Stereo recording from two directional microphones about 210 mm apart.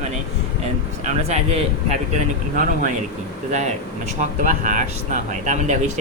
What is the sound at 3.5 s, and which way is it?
Speech, 35° right (ahead or behind).